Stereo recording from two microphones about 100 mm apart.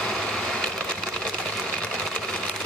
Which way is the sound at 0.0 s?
5° left (ahead or behind).